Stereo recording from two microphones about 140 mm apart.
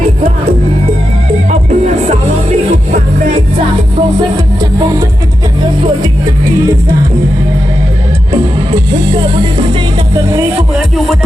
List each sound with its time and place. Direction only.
1.5 s music: 55° right (ahead or behind)
9.1 s music: 40° right (ahead or behind)
10.8 s music: centre (ahead or behind)